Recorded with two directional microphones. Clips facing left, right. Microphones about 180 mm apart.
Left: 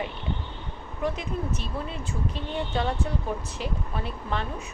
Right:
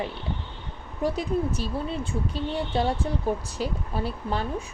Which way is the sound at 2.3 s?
35° right (ahead or behind).